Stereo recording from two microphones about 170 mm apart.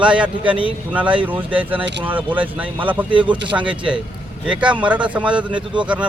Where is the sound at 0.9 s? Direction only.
10° right (ahead or behind).